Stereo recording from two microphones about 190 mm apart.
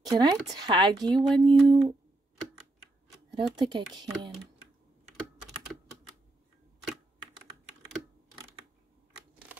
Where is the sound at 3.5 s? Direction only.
25° right (ahead or behind).